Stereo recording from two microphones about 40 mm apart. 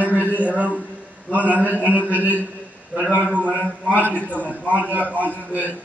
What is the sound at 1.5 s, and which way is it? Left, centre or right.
A man's voice, right.